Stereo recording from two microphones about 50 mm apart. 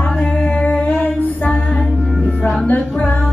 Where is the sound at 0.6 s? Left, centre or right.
Left.